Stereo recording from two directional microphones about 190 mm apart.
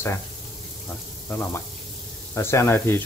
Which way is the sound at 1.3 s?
10° left (ahead or behind).